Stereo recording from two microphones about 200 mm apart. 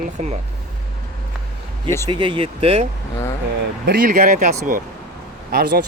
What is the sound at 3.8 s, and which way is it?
Speech, 45° right (ahead or behind).